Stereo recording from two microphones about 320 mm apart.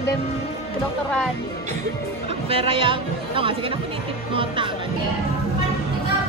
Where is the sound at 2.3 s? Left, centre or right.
Centre.